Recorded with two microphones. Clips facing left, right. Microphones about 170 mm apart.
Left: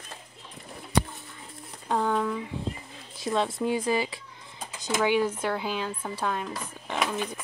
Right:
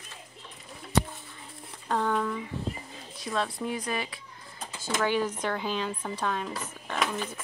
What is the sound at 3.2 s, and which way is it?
Speech, 25° left (ahead or behind).